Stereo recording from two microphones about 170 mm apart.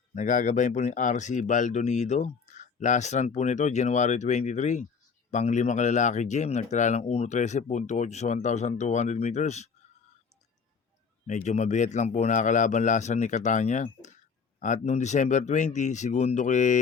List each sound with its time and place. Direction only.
0.1 s speech: 45° left (ahead or behind)
11.3 s speech: 45° left (ahead or behind)